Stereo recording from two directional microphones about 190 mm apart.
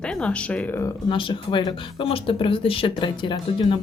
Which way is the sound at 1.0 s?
25° left (ahead or behind).